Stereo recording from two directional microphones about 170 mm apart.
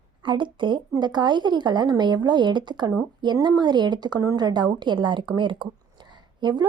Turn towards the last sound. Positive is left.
turn(degrees=-25)  # may be behind; listen again after turning